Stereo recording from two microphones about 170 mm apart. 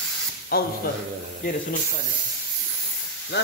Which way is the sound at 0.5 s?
65° left (ahead or behind).